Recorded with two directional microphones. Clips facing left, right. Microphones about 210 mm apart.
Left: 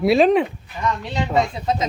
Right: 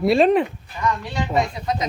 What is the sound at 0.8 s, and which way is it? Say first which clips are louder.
Speech: even; 20° left (ahead or behind).